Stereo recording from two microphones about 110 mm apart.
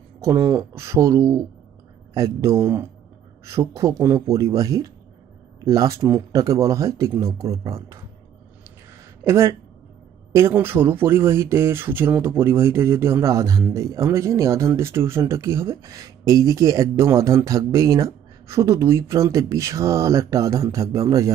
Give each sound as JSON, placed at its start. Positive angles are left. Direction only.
{"t": 0.2, "sound": "speech", "side_deg": -25}
{"t": 9.2, "sound": "speech", "side_deg": -25}